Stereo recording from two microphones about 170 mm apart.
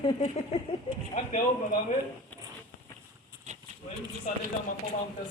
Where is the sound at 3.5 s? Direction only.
45° right (ahead or behind).